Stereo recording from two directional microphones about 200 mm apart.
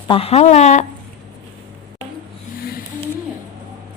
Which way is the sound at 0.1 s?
30° left (ahead or behind).